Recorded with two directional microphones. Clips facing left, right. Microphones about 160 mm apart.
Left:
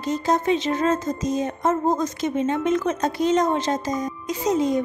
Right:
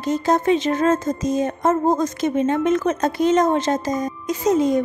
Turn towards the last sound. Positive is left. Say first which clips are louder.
# right 3 dB
turn(degrees=-50)  # may be behind; listen again after turning